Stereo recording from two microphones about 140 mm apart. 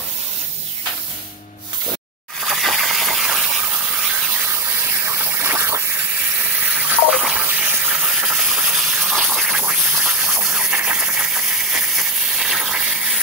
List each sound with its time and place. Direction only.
2.4 s coin: centre (ahead or behind)
5.2 s a sound: 15° right (ahead or behind)
6.9 s water: 5° right (ahead or behind)